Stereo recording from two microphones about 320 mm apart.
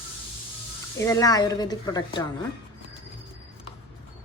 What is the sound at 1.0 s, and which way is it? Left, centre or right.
Speech, centre.